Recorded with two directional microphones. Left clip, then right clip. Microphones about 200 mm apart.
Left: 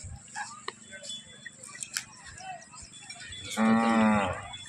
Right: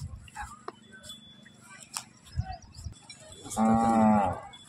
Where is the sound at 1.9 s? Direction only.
Centre (ahead or behind).